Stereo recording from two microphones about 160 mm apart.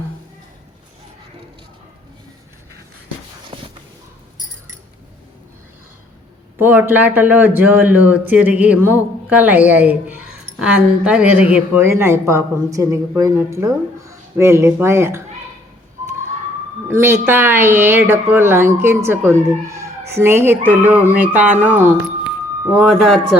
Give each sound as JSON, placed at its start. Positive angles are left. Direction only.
{"t": 3.5, "sound": "a sound", "side_deg": -35}
{"t": 6.6, "sound": "a woman's voice", "side_deg": -10}
{"t": 16.9, "sound": "a woman's voice", "side_deg": -15}
{"t": 22.7, "sound": "speech", "side_deg": 0}